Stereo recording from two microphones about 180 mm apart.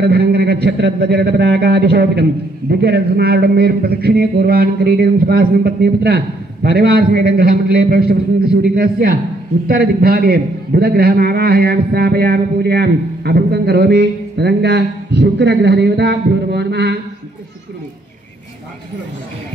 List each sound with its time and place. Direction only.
0.0 s a man's voice: 60° right (ahead or behind)